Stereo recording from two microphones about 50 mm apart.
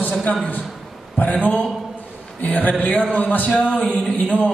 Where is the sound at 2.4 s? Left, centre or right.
Left.